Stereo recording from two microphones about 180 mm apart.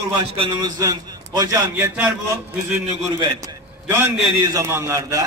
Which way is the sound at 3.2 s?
25° right (ahead or behind).